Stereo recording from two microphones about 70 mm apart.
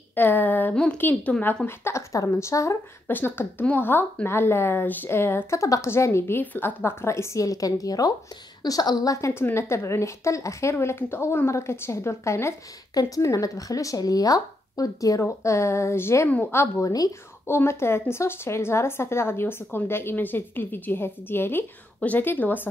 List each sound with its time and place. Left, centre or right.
0.1 s a sound: left
0.9 s a woman's voice: left
1.7 s speech: left
3.1 s a woman's voice: left
5.6 s a woman's voice: left
6.4 s a woman's voice: left
6.8 s speech: left
9.3 s a woman's voice: left
12.9 s speech: left
16.3 s a woman's voice: left
17.5 s a woman's voice: left